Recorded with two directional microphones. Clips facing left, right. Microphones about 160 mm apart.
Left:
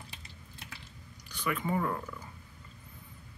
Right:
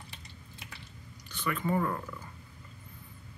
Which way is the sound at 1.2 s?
10° left (ahead or behind).